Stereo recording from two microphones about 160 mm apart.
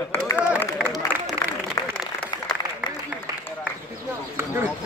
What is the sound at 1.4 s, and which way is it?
Applause, 25° left (ahead or behind).